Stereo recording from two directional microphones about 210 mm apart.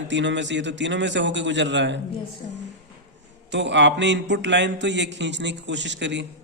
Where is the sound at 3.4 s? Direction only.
60° right (ahead or behind).